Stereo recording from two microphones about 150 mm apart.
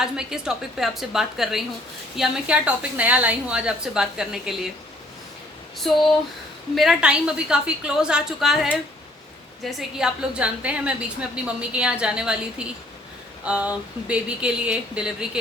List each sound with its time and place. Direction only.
0.0 s a woman's voice: 5° right (ahead or behind)
5.8 s a woman's voice: centre (ahead or behind)